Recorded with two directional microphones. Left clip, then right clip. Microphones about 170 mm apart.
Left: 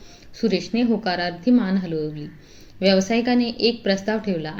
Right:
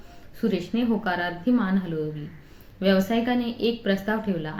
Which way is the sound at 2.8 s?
20° left (ahead or behind).